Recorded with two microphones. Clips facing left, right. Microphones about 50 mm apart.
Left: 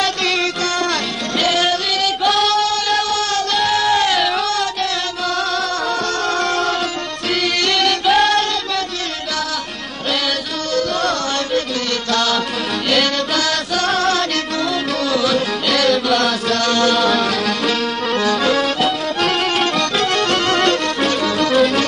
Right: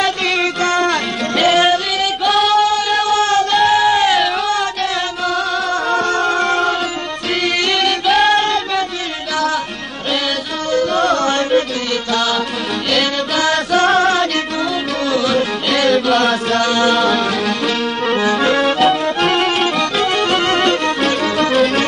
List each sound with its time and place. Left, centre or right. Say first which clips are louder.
1.4 s music: right 5 dB; right
2.2 s singing: right 4 dB; centre
3.2 s music: right 5 dB; right
3.5 s music: right 2 dB; centre
6.2 s music: right 3 dB; centre
7.4 s music: right 1 dB; centre
11.2 s music: right 5 dB; right
12.1 s music: even; centre
13.4 s music: right 5 dB; right
15.0 s music: right 2 dB; centre
16.9 s music: right 1 dB; centre